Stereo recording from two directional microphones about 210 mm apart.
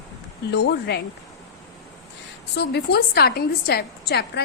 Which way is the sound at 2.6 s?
50° left (ahead or behind).